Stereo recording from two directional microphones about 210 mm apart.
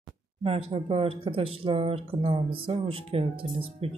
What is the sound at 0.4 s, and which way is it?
Speech, 25° right (ahead or behind).